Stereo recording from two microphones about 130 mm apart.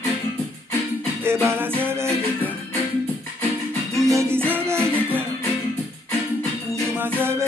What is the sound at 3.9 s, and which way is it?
Music, 25° right (ahead or behind).